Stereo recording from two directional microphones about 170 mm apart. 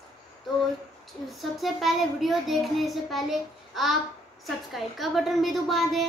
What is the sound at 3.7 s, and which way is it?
Babbling, centre (ahead or behind).